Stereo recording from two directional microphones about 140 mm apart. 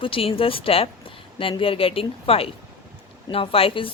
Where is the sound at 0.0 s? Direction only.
40° left (ahead or behind).